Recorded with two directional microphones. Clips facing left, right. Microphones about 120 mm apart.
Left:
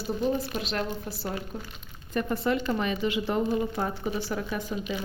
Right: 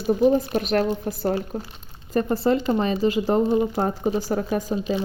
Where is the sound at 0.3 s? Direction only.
50° right (ahead or behind).